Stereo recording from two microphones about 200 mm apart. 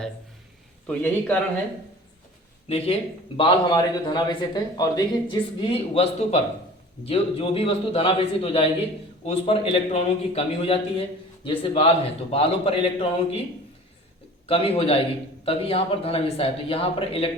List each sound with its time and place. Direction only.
0.9 s a man's voice: 10° left (ahead or behind)
2.6 s a man's voice: 30° left (ahead or behind)
14.4 s a man's voice: 30° left (ahead or behind)